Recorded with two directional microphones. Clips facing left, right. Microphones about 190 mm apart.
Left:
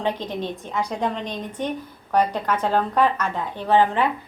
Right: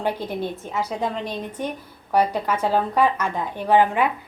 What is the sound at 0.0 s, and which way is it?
A woman's voice, 10° right (ahead or behind).